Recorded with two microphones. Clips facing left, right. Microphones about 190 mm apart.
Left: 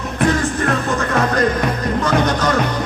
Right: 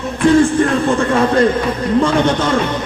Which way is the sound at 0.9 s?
30° right (ahead or behind).